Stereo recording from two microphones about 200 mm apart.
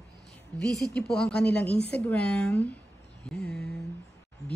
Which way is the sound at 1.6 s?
30° right (ahead or behind).